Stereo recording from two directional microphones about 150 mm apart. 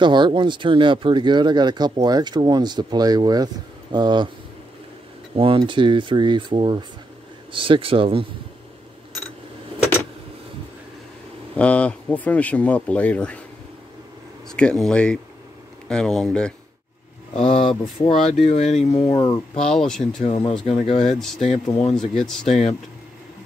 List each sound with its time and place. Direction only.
0.0 s speech: 30° right (ahead or behind)
5.3 s speech: 35° right (ahead or behind)
11.5 s speech: 10° left (ahead or behind)
14.5 s speech: 5° left (ahead or behind)
17.5 s speech: 35° left (ahead or behind)
19.6 s speech: 5° left (ahead or behind)
20.2 s speech: 40° left (ahead or behind)
21.0 s speech: 5° left (ahead or behind)